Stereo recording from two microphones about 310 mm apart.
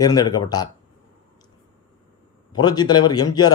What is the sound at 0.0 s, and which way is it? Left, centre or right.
Speech, centre.